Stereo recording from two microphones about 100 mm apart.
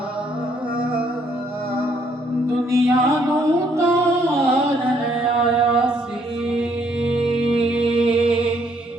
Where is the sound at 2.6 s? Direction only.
30° right (ahead or behind).